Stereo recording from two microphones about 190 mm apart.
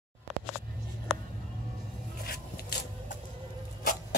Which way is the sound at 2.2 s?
55° left (ahead or behind).